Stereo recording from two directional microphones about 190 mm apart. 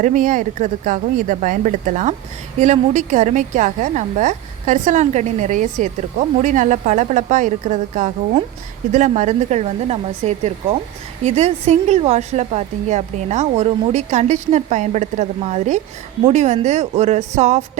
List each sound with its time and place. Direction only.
0.0 s a woman's voice: 40° right (ahead or behind)